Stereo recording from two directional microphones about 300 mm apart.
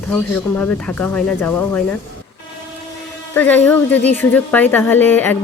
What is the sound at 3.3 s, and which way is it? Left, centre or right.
Speech, centre.